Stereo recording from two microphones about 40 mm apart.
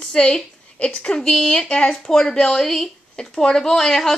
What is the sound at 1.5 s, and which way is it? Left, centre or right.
Speech, left.